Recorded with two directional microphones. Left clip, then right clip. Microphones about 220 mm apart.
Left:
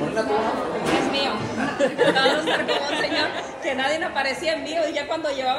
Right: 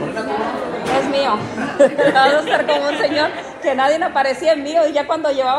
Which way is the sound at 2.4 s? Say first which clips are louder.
Right 6 dB; 50° left (ahead or behind).